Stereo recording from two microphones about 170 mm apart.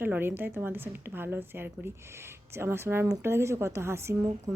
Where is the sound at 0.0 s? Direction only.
10° right (ahead or behind).